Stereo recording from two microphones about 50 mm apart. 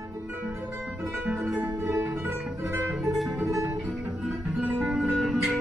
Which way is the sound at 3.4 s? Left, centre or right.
Right.